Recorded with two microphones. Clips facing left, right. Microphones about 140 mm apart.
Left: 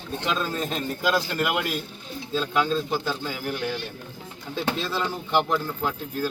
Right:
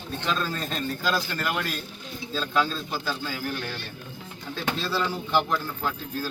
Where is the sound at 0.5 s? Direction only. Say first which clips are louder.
Left 2 dB; 20° left (ahead or behind).